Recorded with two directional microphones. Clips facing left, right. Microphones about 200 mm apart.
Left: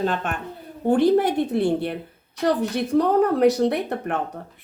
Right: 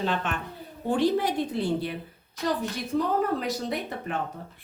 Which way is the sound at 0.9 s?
55° left (ahead or behind).